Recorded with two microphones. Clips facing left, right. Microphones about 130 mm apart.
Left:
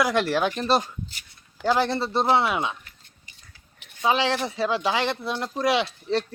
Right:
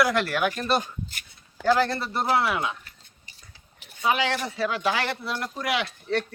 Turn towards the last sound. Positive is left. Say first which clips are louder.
# left 3 dB
turn(degrees=25)  # may be behind; listen again after turning